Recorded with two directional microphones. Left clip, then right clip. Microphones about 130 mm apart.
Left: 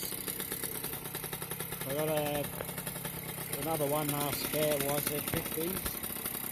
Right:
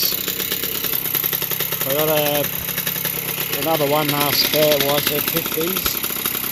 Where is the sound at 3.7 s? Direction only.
10° right (ahead or behind).